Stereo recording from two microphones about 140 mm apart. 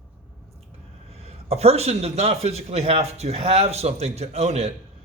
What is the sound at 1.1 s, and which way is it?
A man's voice, 45° right (ahead or behind).